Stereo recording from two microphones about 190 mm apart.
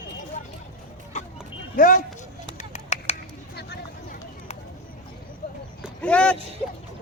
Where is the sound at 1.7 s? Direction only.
45° left (ahead or behind).